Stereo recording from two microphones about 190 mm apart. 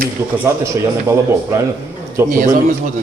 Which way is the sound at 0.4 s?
15° right (ahead or behind).